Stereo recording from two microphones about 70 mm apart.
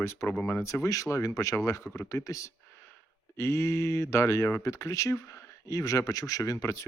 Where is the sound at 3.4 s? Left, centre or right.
Left.